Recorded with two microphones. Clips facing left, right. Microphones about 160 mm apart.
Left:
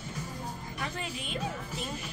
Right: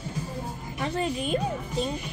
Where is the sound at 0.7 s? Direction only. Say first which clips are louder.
Right 12 dB; 30° right (ahead or behind).